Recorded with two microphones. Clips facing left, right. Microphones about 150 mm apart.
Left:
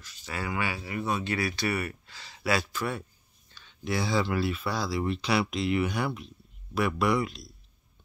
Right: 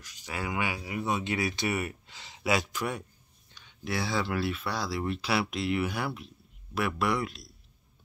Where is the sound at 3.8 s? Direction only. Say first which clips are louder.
Left 3 dB; centre (ahead or behind).